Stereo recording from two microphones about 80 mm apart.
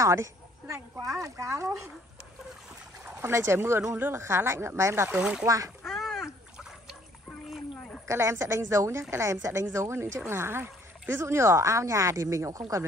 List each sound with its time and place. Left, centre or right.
0.0 s speech: right
3.2 s speech: right
5.1 s speech: centre
5.4 s a child's voice: right
5.9 s a sound: centre
8.1 s speech: right